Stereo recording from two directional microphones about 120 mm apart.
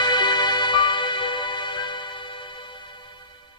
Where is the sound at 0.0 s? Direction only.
40° left (ahead or behind).